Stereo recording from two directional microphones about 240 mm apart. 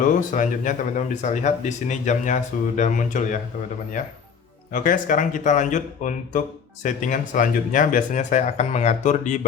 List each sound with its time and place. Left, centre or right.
0.0 s speech: left
4.7 s speech: left